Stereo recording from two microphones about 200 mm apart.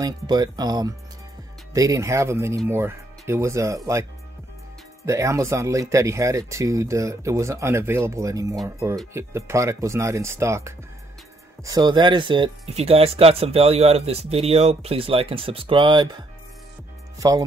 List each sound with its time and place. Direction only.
0.0 s speech: 20° right (ahead or behind)
5.0 s speech: 15° right (ahead or behind)